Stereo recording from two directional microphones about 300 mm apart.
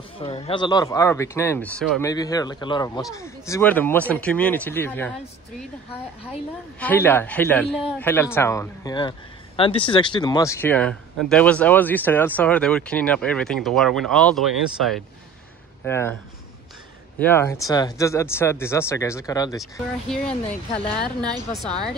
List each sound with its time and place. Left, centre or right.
0.2 s speech: centre
6.8 s speech: centre
17.2 s speech: centre
19.6 s speech: centre
20.4 s speech: centre